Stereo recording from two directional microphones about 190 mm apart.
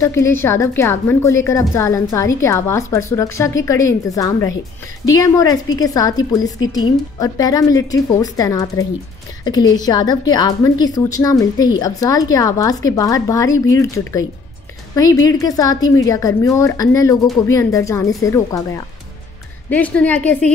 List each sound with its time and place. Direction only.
0.0 s a woman's voice: 15° left (ahead or behind)
19.7 s a woman's voice: 5° left (ahead or behind)